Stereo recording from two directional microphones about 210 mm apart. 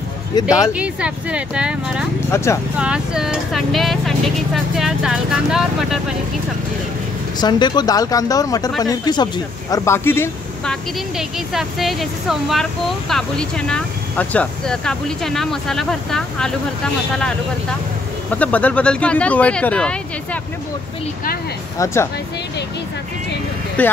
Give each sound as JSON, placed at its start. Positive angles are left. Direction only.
{"t": 0.4, "sound": "speech", "side_deg": 15}
{"t": 0.7, "sound": "speech", "side_deg": -5}
{"t": 2.3, "sound": "speech", "side_deg": 15}
{"t": 2.8, "sound": "speech", "side_deg": -5}
{"t": 7.3, "sound": "speech", "side_deg": 20}
{"t": 18.3, "sound": "speech", "side_deg": 5}
{"t": 21.7, "sound": "speech", "side_deg": 15}
{"t": 23.8, "sound": "speech", "side_deg": 5}